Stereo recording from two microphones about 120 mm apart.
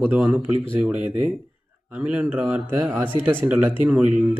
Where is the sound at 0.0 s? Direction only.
15° right (ahead or behind).